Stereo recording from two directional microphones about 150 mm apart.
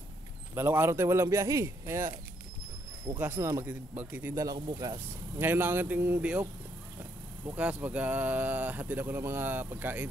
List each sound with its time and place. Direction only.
0.6 s speech: 15° right (ahead or behind)
3.2 s speech: 15° right (ahead or behind)
4.6 s speech: 30° right (ahead or behind); by 6.4 s 10° right (ahead or behind)
7.4 s speech: 10° right (ahead or behind)